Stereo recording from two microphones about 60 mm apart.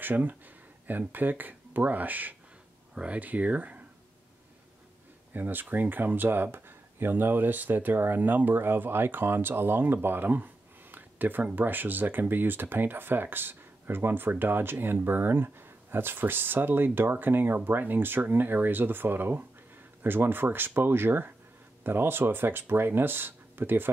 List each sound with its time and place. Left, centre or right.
0.0 s speech: right
5.3 s speech: right